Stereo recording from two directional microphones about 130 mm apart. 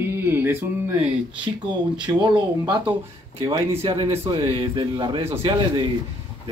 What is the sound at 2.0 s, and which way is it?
Speech, 35° right (ahead or behind).